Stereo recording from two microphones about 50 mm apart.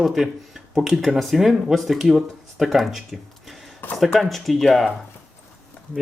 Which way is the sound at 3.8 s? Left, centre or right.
Left.